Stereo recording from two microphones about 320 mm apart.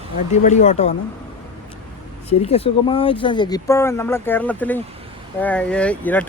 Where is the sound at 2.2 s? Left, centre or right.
Centre.